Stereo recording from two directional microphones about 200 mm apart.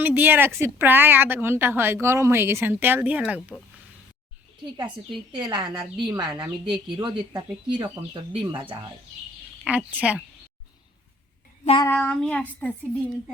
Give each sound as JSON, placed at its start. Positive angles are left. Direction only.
{"t": 0.0, "sound": "speech", "side_deg": -10}
{"t": 5.3, "sound": "a woman's voice", "side_deg": -20}
{"t": 9.6, "sound": "speech", "side_deg": -5}
{"t": 11.6, "sound": "child singing", "side_deg": 25}
{"t": 11.9, "sound": "child singing", "side_deg": 5}
{"t": 12.5, "sound": "a woman's voice", "side_deg": 5}